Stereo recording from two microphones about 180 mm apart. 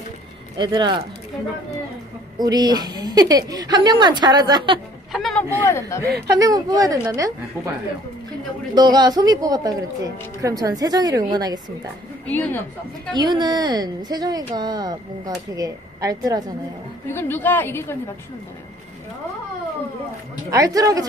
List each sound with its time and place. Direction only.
0.6 s a man's voice: 25° right (ahead or behind)
2.3 s a man's voice: 20° right (ahead or behind)
5.1 s vehicle: centre (ahead or behind)
5.7 s a woman's voice: 15° left (ahead or behind)
6.4 s a man's voice: 20° right (ahead or behind)
8.7 s a man's voice: 25° right (ahead or behind)
12.3 s a woman's voice: 10° left (ahead or behind)
13.1 s a man's voice: 25° right (ahead or behind)
17.1 s a woman's voice: 10° left (ahead or behind)
20.4 s a man's voice: 20° right (ahead or behind)